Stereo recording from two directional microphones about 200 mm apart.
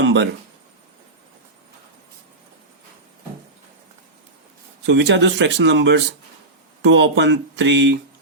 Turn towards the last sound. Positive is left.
turn(degrees=-65)  # may be behind; listen again after turning